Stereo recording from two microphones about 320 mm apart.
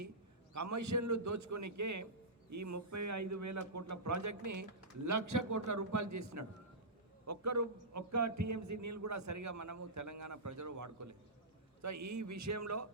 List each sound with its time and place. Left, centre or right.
0.5 s a man's voice: right